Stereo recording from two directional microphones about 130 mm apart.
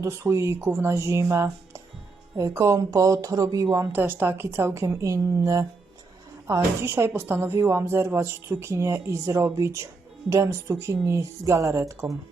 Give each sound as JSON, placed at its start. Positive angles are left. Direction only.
{"t": 0.0, "sound": "a woman's voice", "side_deg": -20}